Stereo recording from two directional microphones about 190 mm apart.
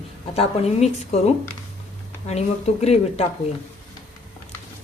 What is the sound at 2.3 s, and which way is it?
Speech, 35° left (ahead or behind).